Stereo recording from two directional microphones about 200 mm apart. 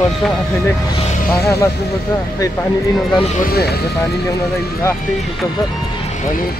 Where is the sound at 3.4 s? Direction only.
50° left (ahead or behind).